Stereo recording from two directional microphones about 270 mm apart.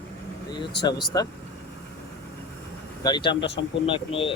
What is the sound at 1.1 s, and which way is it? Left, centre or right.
Speech, centre.